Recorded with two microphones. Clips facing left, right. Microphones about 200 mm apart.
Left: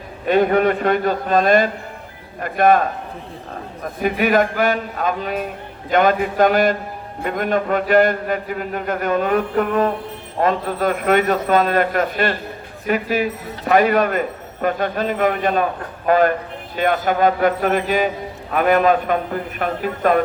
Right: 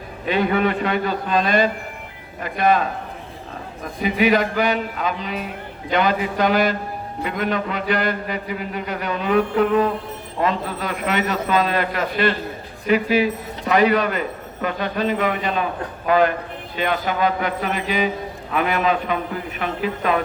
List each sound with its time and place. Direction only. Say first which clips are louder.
0.3 s a man's voice: left 4 dB; 50° left (ahead or behind)
4.0 s a man's voice: left 1 dB; 50° left (ahead or behind)